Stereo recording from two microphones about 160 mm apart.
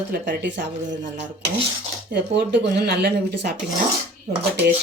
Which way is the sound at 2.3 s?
90° right.